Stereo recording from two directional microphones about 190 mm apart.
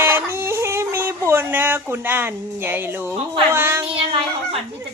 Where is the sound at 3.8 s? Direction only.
30° right (ahead or behind).